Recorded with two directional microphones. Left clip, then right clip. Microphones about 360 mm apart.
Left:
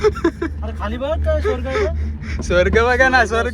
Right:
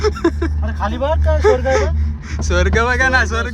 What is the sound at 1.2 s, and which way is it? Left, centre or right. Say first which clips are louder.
Speech: right 9 dB; centre.